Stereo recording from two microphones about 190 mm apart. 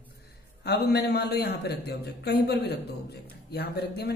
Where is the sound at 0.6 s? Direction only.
60° left (ahead or behind).